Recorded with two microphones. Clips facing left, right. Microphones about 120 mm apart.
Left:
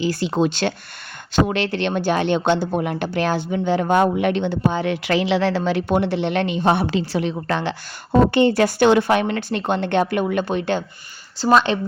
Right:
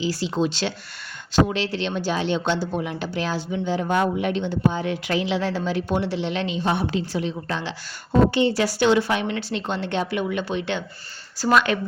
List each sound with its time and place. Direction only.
0.0 s speech: 55° left (ahead or behind)
11.3 s speech: 25° left (ahead or behind)